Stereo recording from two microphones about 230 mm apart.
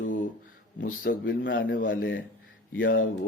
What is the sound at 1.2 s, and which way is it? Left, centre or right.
Speech, left.